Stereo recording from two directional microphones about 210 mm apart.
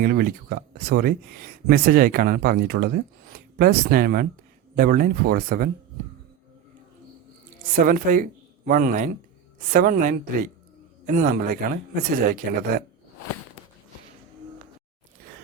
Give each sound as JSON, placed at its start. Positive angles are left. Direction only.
{"t": 0.0, "sound": "speech", "side_deg": -45}
{"t": 7.9, "sound": "speech", "side_deg": -40}